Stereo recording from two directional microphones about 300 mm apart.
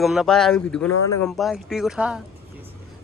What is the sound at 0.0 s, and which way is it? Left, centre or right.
Speech, centre.